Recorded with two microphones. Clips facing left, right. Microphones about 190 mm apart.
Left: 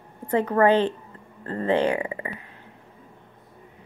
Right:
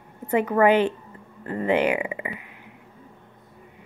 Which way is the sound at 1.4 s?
15° right (ahead or behind).